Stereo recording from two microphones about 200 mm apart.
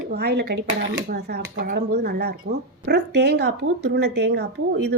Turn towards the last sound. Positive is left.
turn(degrees=-55)  # may be behind; listen again after turning